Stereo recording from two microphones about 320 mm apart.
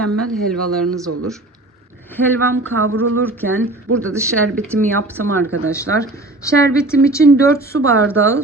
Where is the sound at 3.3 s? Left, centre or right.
Centre.